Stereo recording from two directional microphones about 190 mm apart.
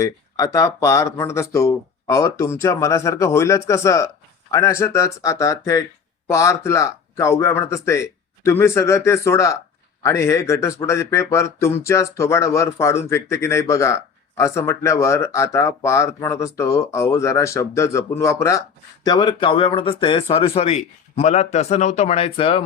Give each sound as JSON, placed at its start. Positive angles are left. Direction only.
{"t": 0.0, "sound": "speech", "side_deg": 15}